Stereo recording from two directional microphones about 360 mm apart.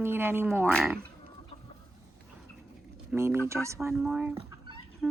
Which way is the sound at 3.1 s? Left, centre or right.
Centre.